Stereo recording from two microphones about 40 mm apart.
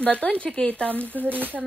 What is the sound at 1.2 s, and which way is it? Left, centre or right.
Frying, right.